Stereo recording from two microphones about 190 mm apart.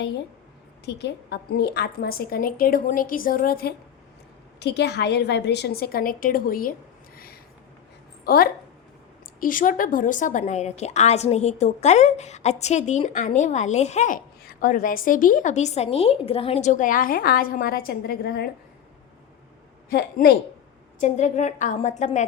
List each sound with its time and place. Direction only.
0.9 s a woman's voice: 65° left (ahead or behind)
4.6 s a woman's voice: 60° left (ahead or behind)
8.2 s a woman's voice: 50° left (ahead or behind)
19.9 s a woman's voice: 55° left (ahead or behind)
21.0 s a woman's voice: 40° left (ahead or behind)